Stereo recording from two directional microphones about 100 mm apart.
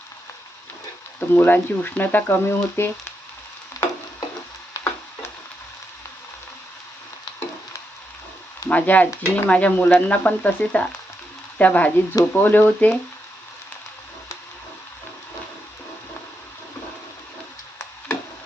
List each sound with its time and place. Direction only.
1.3 s speech: 20° left (ahead or behind)
3.8 s a sound: 40° left (ahead or behind)
4.7 s tick-tock: 30° left (ahead or behind)
8.7 s speech: 15° left (ahead or behind)